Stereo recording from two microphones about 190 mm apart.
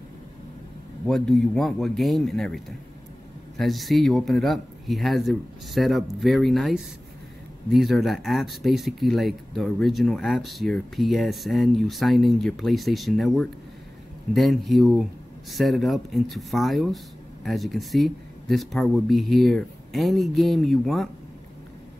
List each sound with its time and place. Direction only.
1.0 s speech: centre (ahead or behind)